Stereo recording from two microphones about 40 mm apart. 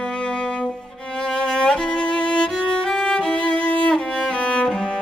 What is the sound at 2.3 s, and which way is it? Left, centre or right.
Music, left.